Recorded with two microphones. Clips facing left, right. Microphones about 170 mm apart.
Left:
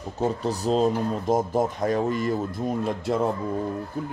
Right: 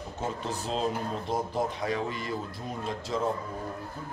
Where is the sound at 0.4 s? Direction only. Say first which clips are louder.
Left 9 dB; 40° left (ahead or behind); by 3.2 s 55° left (ahead or behind).